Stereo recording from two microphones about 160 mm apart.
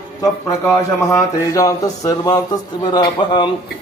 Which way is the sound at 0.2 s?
20° left (ahead or behind).